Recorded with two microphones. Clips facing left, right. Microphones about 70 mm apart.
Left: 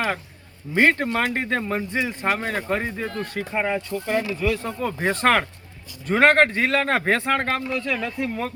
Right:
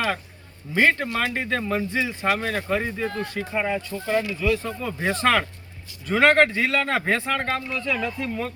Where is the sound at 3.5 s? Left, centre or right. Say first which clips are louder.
Left 1 dB; left.